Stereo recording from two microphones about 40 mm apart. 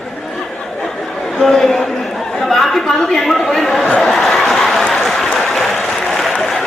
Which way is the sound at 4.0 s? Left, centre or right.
Centre.